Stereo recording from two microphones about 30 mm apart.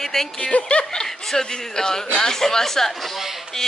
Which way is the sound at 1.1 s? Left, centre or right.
Centre.